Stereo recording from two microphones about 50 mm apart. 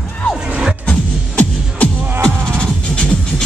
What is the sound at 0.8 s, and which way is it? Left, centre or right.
Music, left.